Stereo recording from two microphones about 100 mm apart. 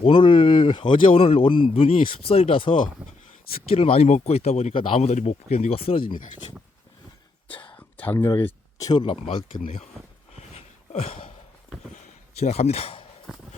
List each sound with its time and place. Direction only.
0.0 s speech: 55° left (ahead or behind)
3.8 s speech: 80° left; by 6.1 s 65° left (ahead or behind)
7.4 s whispering: 60° left (ahead or behind)
7.8 s a sound: 20° left (ahead or behind)
8.8 s speech: 45° left (ahead or behind); by 9.8 s 70° left (ahead or behind)
10.3 s a sound: 90° left
12.4 s speech: 90° left; by 13.1 s 70° left (ahead or behind)